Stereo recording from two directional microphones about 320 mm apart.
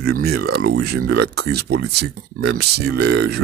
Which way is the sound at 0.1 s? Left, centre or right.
Right.